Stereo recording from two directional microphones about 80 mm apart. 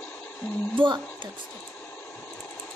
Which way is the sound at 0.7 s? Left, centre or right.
Right.